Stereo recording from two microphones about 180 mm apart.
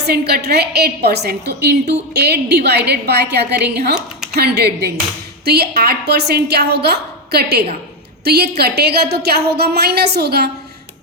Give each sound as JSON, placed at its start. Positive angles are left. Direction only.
{"t": 0.0, "sound": "a woman's voice", "side_deg": -65}